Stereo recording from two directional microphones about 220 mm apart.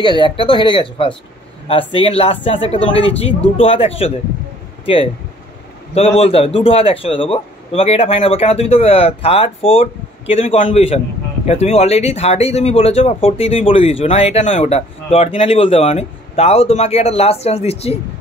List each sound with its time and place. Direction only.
0.0 s speech: 20° left (ahead or behind)
5.9 s speech: 25° left (ahead or behind)